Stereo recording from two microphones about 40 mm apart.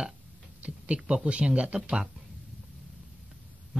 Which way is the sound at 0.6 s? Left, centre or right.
Right.